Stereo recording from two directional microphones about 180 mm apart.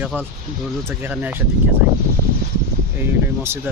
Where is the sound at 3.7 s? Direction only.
10° right (ahead or behind).